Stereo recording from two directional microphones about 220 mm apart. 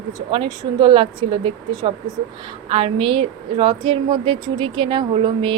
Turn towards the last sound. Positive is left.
turn(degrees=-20)  # may be behind; listen again after turning